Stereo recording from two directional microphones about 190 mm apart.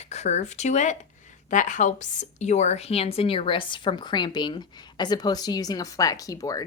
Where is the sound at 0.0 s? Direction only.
35° left (ahead or behind).